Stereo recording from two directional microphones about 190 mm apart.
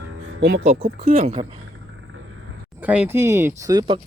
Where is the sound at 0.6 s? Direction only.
35° right (ahead or behind).